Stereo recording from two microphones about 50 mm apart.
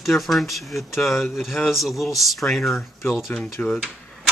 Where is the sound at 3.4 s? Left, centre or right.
Centre.